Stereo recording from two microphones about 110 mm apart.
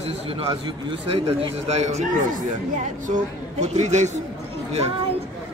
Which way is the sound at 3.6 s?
90° right.